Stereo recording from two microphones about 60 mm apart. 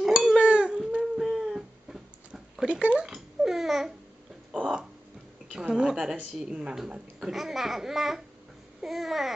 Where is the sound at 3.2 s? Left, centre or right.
Centre.